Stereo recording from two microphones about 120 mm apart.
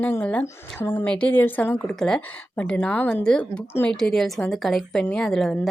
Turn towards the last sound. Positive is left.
turn(degrees=5)  # may be behind; listen again after turning